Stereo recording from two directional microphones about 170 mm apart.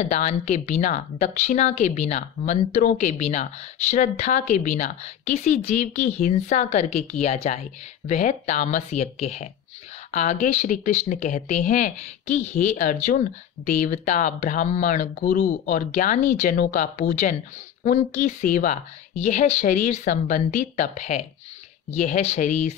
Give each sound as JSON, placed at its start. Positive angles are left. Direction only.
{"t": 0.0, "sound": "speech", "side_deg": 40}